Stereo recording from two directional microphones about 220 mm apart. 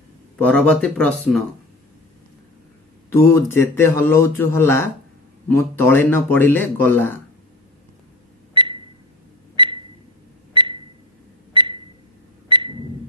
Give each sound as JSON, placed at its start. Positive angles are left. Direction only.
{"t": 0.4, "sound": "speech", "side_deg": 5}
{"t": 3.3, "sound": "speech", "side_deg": 10}
{"t": 8.5, "sound": "a sound", "side_deg": -20}